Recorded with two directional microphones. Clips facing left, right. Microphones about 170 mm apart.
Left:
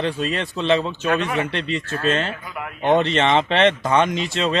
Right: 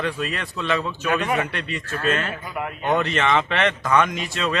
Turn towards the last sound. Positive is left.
turn(degrees=25)  # may be behind; listen again after turning